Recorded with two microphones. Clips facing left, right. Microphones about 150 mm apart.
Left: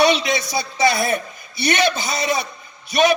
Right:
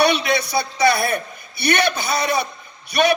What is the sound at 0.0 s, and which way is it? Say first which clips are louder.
A man's voice: left 1 dB; 60° right (ahead or behind).